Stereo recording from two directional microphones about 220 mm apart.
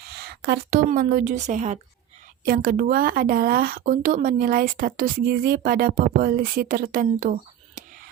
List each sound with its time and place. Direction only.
0.2 s speech: 45° right (ahead or behind)